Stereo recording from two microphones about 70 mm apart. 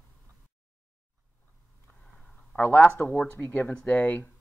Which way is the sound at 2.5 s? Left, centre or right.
Left.